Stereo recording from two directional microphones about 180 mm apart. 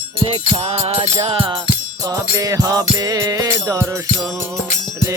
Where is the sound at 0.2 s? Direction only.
30° right (ahead or behind).